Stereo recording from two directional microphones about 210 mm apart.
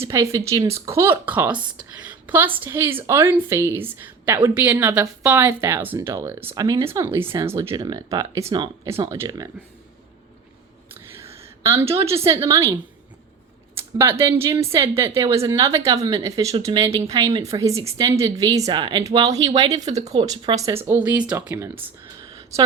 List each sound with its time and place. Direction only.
0.1 s a woman's voice: 15° right (ahead or behind)
7.2 s speech: 25° right (ahead or behind)
7.4 s a woman's voice: 15° right (ahead or behind)
10.9 s a woman's voice: 10° right (ahead or behind)
20.8 s a woman's voice: 10° right (ahead or behind)